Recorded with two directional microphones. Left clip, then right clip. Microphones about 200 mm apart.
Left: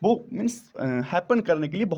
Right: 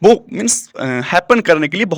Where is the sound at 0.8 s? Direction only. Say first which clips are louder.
Right 10 dB; 10° right (ahead or behind).